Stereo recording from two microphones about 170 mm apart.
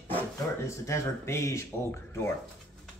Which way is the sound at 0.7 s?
15° left (ahead or behind).